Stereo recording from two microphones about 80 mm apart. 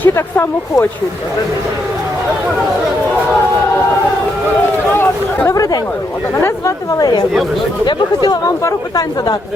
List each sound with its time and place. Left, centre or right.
0.0 s speech: left
5.5 s speech: left
6.3 s speech: left
7.0 s speech: left